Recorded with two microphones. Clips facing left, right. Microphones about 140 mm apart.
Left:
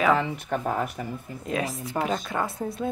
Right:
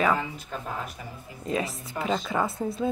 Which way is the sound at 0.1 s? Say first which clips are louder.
Left 5 dB; 70° left (ahead or behind).